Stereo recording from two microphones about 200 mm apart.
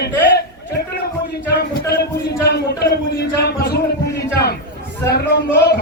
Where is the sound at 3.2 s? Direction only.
55° left (ahead or behind).